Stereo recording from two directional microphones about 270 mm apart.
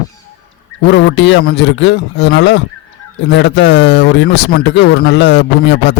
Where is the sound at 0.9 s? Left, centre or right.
Left.